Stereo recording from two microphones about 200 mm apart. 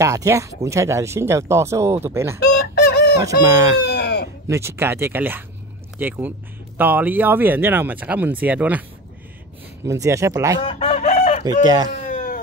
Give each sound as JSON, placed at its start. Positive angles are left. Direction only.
{"t": 0.0, "sound": "speech", "side_deg": -15}
{"t": 2.4, "sound": "fowl", "side_deg": 55}
{"t": 3.2, "sound": "speech", "side_deg": -15}
{"t": 3.8, "sound": "sheep", "side_deg": 55}
{"t": 4.5, "sound": "speech", "side_deg": -15}
{"t": 9.8, "sound": "speech", "side_deg": -15}
{"t": 10.6, "sound": "chicken", "side_deg": 30}
{"t": 11.6, "sound": "speech", "side_deg": -20}
{"t": 11.9, "sound": "cat", "side_deg": 45}